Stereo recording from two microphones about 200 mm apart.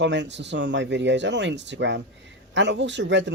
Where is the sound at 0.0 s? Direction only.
60° right (ahead or behind).